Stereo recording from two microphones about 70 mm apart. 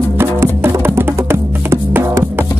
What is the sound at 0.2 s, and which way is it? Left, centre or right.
Music, right.